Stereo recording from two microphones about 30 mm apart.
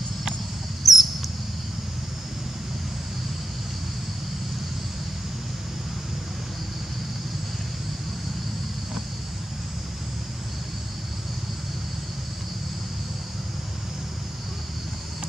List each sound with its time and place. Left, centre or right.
0.8 s rodents: centre